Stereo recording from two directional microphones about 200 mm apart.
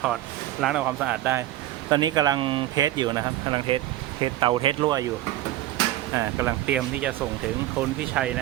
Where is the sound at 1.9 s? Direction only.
20° right (ahead or behind).